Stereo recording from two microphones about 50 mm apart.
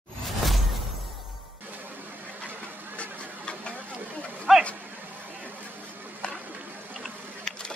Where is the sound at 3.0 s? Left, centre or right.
Left.